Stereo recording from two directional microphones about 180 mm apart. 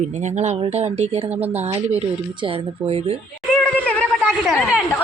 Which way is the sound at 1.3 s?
10° right (ahead or behind).